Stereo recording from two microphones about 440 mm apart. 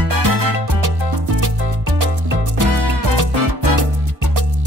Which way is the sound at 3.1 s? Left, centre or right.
Right.